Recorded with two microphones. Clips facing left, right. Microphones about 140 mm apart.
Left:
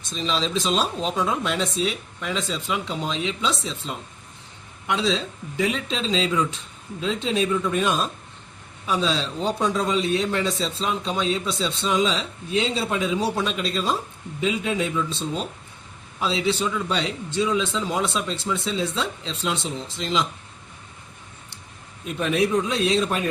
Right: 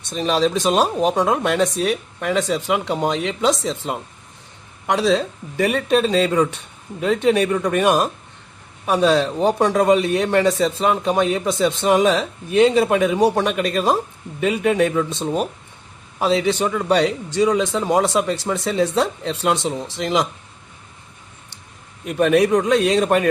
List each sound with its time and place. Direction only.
0.1 s a man's voice: 60° right (ahead or behind)
8.9 s a man's voice: 60° right (ahead or behind); by 9.9 s 80° right
9.9 s a man's voice: 60° right (ahead or behind)
22.0 s a man's voice: 60° right (ahead or behind)